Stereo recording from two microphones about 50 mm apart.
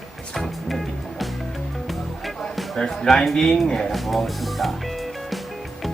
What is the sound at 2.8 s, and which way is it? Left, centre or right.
Speech, centre.